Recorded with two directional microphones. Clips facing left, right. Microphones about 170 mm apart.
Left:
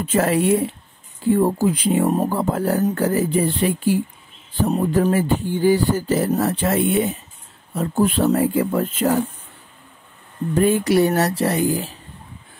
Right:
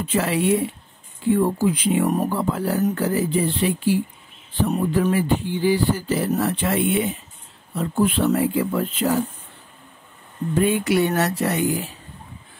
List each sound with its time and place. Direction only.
0.0 s beatboxing: 45° left (ahead or behind)
1.3 s speech: 40° left (ahead or behind)
2.2 s beatboxing: 45° left (ahead or behind)
4.6 s beatboxing: 35° left (ahead or behind)
10.5 s speech: 40° left (ahead or behind)